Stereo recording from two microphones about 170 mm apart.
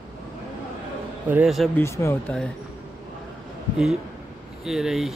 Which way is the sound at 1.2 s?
5° right (ahead or behind).